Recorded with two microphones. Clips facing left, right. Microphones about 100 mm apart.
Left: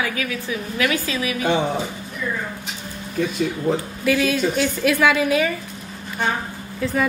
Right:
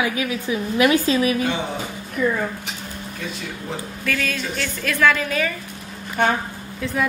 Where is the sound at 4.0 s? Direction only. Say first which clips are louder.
Left 5 dB; 15° left (ahead or behind).